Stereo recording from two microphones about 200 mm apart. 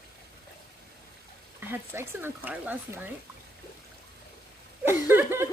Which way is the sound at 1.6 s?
10° right (ahead or behind).